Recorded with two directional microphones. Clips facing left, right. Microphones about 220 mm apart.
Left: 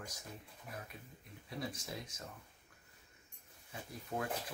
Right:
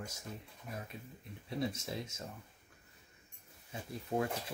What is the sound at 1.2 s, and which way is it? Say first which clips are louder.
Speech: right 6 dB; 25° right (ahead or behind).